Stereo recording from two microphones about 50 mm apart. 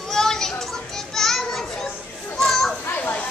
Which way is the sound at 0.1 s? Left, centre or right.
Centre.